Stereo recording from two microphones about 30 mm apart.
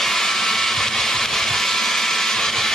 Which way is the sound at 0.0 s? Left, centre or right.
Centre.